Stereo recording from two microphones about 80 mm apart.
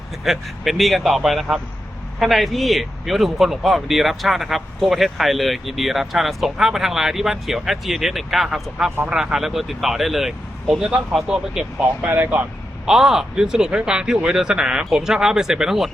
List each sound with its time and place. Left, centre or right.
0.3 s a man's voice: centre
11.8 s speech: right
12.8 s speech: centre